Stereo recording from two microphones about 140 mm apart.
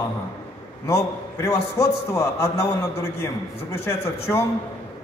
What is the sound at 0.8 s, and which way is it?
A man's voice, 20° left (ahead or behind).